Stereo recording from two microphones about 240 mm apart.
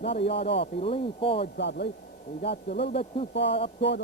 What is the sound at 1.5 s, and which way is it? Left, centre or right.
Speech, left.